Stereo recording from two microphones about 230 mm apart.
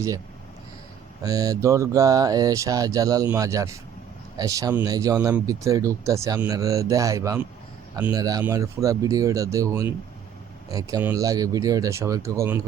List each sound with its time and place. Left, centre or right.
1.2 s speech: centre